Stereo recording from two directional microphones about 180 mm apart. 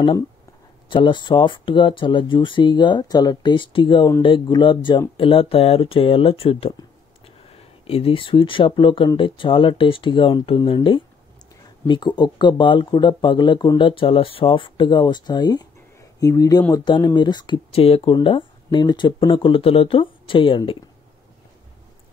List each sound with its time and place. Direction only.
0.8 s speech: 25° left (ahead or behind)